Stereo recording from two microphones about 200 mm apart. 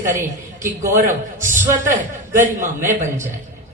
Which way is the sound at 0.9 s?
40° right (ahead or behind).